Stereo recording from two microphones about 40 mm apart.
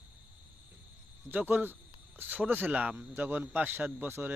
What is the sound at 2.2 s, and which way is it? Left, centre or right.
Speech, right.